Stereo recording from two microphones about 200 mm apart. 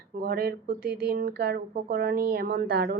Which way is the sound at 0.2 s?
50° right (ahead or behind).